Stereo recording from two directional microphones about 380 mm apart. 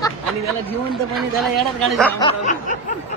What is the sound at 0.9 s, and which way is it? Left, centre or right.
Speech, centre.